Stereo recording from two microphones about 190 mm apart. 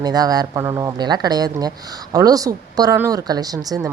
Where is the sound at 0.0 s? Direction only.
20° right (ahead or behind).